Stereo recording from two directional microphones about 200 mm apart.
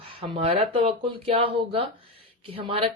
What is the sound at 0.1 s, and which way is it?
Speech, 30° right (ahead or behind).